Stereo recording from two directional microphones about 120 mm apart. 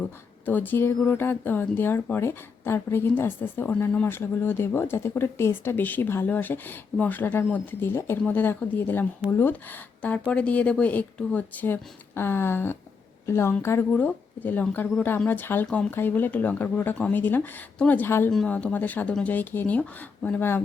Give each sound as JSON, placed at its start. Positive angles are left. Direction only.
{"t": 0.0, "sound": "speech", "side_deg": 15}